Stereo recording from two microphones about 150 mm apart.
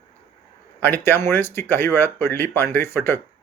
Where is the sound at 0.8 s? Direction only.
15° left (ahead or behind).